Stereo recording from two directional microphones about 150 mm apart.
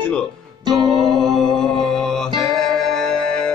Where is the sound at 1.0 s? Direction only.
Centre (ahead or behind).